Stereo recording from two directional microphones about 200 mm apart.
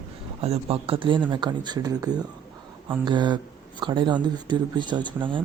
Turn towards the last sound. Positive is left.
turn(degrees=-25)  # may be behind; listen again after turning